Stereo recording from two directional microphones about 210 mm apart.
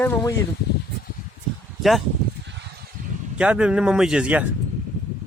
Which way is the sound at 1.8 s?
Centre (ahead or behind).